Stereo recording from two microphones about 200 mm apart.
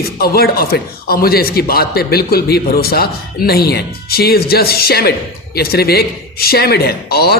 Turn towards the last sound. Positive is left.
turn(degrees=50)  # may be behind; listen again after turning